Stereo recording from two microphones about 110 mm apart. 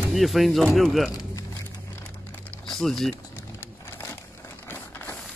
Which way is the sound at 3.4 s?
20° left (ahead or behind).